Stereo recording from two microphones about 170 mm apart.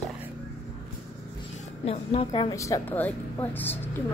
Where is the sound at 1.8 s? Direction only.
35° left (ahead or behind); by 4.0 s 10° left (ahead or behind).